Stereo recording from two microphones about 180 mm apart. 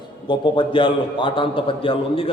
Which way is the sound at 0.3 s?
25° left (ahead or behind).